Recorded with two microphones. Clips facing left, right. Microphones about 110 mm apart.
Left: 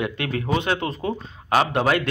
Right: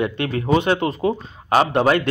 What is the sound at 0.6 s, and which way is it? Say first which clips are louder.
Speech: right 5 dB; 5° right (ahead or behind).